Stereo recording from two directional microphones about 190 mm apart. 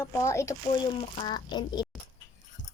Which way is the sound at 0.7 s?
25° left (ahead or behind).